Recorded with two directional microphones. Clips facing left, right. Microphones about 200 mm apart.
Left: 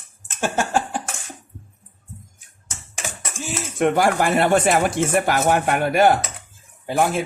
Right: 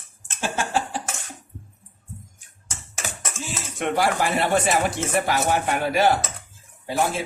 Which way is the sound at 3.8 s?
50° left (ahead or behind).